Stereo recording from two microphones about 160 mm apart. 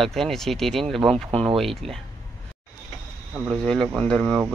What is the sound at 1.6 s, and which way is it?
Speech, centre (ahead or behind).